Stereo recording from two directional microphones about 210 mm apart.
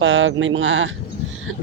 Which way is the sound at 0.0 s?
65° right (ahead or behind).